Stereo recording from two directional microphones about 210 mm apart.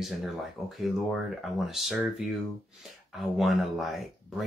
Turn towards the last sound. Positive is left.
turn(degrees=0)  # may be behind; listen again after turning